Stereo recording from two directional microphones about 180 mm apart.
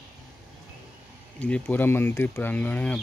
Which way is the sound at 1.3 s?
10° left (ahead or behind).